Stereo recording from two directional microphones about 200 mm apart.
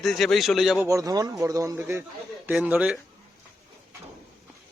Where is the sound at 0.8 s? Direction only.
15° right (ahead or behind).